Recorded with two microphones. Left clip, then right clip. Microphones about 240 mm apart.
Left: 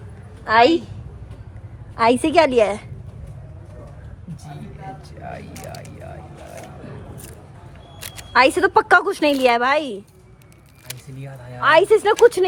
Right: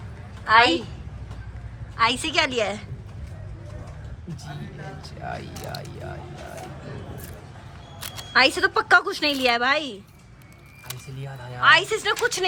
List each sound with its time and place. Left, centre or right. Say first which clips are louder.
0.4 s speech: left 3 dB; centre
2.0 s speech: left 6 dB; centre
8.3 s a woman's voice: left 4 dB; centre
11.6 s speech: left 4 dB; centre